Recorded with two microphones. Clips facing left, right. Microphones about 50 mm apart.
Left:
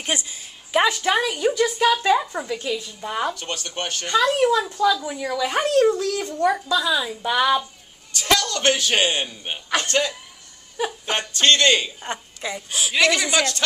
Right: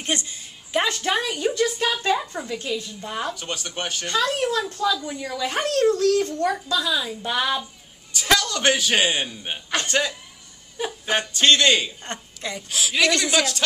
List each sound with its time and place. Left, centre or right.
0.0 s speech: centre
3.3 s speech: centre
4.3 s speech: centre
8.1 s speech: centre
12.0 s a woman's voice: centre
12.9 s speech: centre